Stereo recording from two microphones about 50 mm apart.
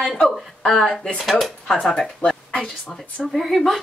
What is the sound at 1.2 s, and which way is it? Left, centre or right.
Speech, centre.